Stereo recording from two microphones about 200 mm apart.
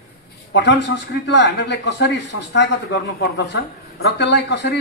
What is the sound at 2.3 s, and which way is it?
Speech, 90° left.